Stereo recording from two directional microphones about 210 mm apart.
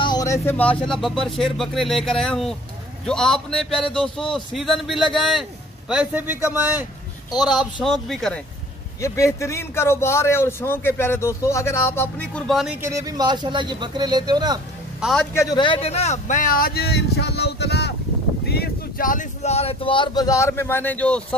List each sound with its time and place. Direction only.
0.0 s speech: 20° left (ahead or behind); by 6.9 s 10° right (ahead or behind)
7.5 s speech: centre (ahead or behind)
9.0 s speech: 15° left (ahead or behind)
12.8 s speech: 15° right (ahead or behind)
15.0 s a man's voice: centre (ahead or behind)
15.3 s a man's voice: 20° left (ahead or behind)